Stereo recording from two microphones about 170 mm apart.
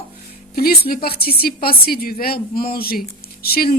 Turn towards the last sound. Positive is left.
turn(degrees=60)  # may be behind; listen again after turning